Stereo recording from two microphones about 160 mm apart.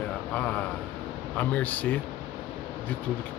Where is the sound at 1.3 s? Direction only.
10° left (ahead or behind).